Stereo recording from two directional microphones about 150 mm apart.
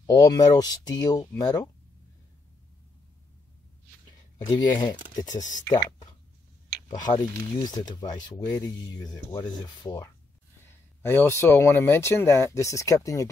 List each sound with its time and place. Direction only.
0.0 s speech: 25° left (ahead or behind)
4.5 s speech: 25° left (ahead or behind)
5.3 s speech: 55° left (ahead or behind)
5.6 s speech: 25° left (ahead or behind)